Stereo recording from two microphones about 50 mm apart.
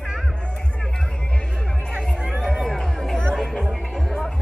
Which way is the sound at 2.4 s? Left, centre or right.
Centre.